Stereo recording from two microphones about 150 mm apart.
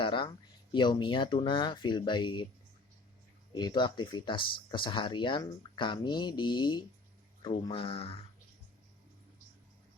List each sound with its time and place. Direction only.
0.0 s speech: 35° left (ahead or behind)
3.5 s speech: 30° left (ahead or behind)